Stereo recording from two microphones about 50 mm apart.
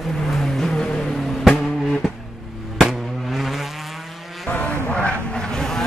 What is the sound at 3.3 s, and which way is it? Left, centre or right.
Vehicle, centre.